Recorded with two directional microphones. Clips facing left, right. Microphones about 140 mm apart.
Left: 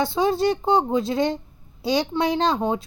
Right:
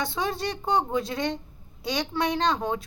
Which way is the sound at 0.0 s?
25° left (ahead or behind).